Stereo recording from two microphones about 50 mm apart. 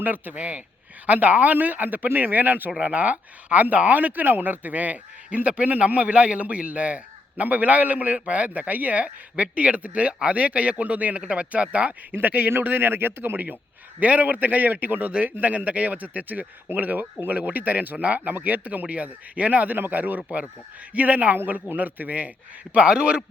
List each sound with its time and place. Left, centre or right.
0.0 s speech: right
12.1 s a man's voice: right
14.0 s speech: right
21.3 s speech: right
22.7 s speech: centre